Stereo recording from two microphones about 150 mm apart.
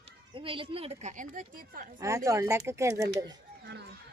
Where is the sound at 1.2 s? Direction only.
65° right (ahead or behind).